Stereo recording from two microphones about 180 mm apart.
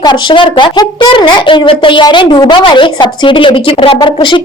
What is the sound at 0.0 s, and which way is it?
A woman's voice, 25° left (ahead or behind).